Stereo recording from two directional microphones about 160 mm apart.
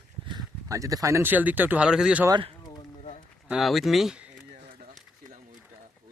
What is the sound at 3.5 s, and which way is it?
Speech, centre (ahead or behind).